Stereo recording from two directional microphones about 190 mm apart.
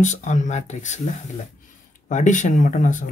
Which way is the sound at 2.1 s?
40° left (ahead or behind).